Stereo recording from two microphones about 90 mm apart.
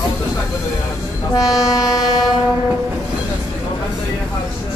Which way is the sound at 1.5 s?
5° right (ahead or behind).